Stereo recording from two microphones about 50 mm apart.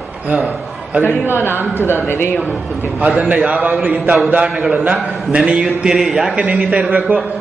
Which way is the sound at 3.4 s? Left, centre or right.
Right.